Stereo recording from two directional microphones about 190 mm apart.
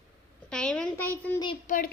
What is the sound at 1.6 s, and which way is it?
Speech, 45° left (ahead or behind).